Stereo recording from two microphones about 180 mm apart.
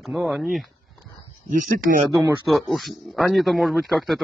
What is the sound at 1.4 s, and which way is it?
Speech, 50° right (ahead or behind).